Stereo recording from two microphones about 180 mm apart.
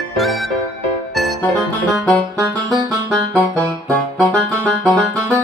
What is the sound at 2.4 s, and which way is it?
Music, 20° right (ahead or behind).